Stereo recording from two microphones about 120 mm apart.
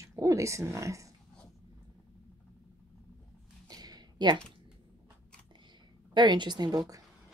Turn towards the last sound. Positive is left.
turn(degrees=-30)  # may be behind; listen again after turning